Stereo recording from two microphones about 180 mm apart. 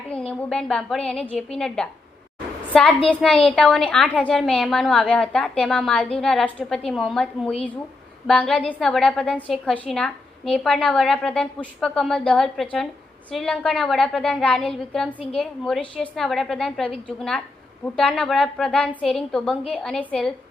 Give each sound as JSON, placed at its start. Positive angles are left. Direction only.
{"t": 0.1, "sound": "a woman's voice", "side_deg": 5}